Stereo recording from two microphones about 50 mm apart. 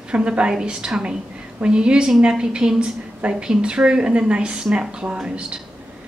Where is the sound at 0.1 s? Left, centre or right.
Right.